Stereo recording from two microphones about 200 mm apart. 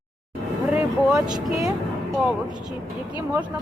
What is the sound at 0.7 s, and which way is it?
Vehicle, 5° right (ahead or behind).